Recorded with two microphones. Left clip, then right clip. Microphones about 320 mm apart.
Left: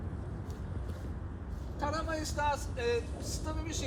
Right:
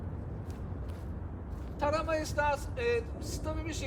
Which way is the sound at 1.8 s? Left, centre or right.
Centre.